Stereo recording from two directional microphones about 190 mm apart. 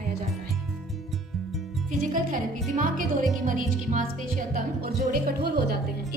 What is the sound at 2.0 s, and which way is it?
A woman's voice, 45° right (ahead or behind).